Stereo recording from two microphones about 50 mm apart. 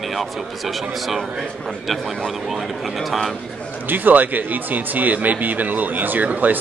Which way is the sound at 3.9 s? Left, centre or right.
Right.